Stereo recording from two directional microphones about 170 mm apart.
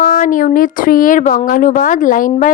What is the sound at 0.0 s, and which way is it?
Speech, 50° left (ahead or behind).